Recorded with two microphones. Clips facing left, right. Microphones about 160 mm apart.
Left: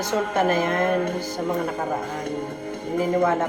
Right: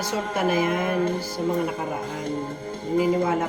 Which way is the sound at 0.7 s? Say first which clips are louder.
Left 1 dB; 55° left (ahead or behind).